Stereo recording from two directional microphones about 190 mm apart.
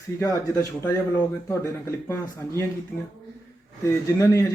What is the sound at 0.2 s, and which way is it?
A man's voice, 15° left (ahead or behind).